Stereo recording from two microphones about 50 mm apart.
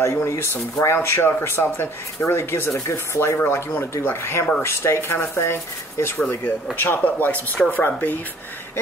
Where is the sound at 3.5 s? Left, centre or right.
Left.